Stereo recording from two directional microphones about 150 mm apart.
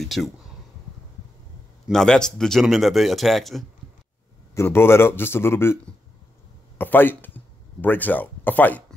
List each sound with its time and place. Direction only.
0.0 s speech: centre (ahead or behind)
1.9 s speech: 5° left (ahead or behind)
4.6 s speech: 15° left (ahead or behind)
6.8 s speech: 15° left (ahead or behind)